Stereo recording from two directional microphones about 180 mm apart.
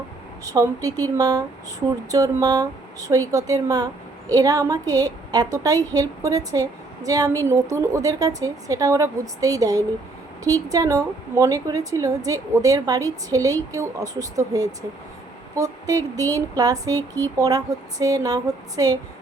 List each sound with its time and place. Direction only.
0.4 s a woman's voice: 20° right (ahead or behind)